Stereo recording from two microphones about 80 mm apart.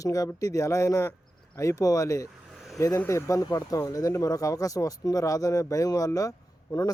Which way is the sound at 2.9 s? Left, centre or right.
Left.